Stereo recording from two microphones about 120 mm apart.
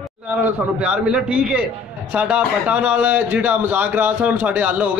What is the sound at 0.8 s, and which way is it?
A man's voice, 5° right (ahead or behind).